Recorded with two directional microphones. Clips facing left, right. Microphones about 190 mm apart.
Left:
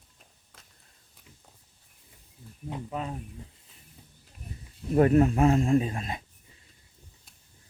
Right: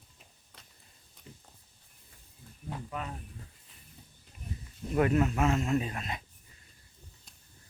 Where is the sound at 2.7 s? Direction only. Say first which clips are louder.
Left 4 dB; 30° left (ahead or behind).